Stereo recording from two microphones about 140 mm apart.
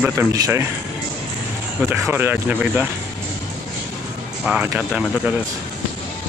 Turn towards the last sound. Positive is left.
turn(degrees=-10)  # may be behind; listen again after turning